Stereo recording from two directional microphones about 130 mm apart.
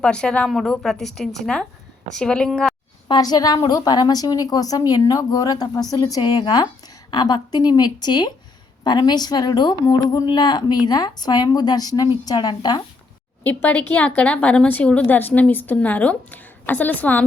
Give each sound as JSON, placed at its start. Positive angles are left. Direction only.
{"t": 0.0, "sound": "a woman's voice", "side_deg": 5}
{"t": 3.1, "sound": "a woman's voice", "side_deg": 30}
{"t": 13.4, "sound": "a woman's voice", "side_deg": 15}